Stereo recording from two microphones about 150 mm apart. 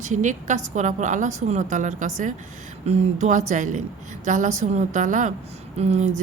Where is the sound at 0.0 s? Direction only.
55° right (ahead or behind).